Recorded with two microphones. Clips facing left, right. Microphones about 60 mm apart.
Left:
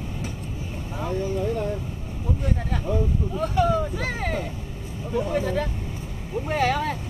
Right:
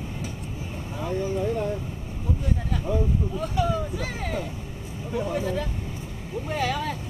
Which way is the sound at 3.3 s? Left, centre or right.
Left.